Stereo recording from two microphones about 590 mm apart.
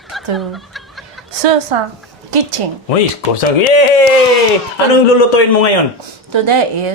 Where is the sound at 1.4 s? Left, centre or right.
Right.